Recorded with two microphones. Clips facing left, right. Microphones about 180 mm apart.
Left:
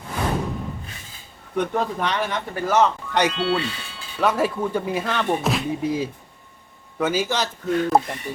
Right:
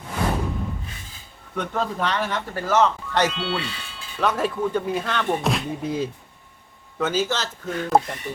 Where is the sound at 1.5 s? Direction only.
15° left (ahead or behind).